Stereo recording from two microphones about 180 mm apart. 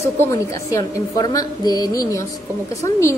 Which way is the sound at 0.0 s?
15° left (ahead or behind).